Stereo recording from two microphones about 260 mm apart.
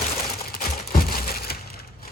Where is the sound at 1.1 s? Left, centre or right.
Left.